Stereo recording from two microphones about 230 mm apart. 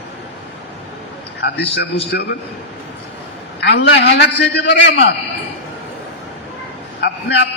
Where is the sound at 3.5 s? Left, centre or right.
Left.